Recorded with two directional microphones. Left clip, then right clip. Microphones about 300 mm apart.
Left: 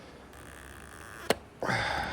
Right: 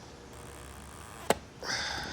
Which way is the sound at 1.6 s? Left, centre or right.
Left.